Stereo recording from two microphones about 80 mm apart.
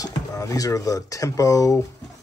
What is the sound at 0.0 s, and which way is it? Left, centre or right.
Speech, left.